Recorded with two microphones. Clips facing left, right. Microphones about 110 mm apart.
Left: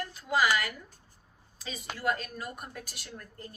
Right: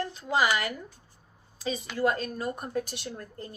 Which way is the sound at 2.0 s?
30° right (ahead or behind).